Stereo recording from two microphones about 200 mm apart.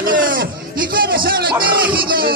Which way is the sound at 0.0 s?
45° right (ahead or behind).